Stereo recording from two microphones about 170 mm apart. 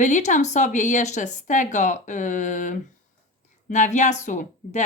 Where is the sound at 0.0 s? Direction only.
45° left (ahead or behind).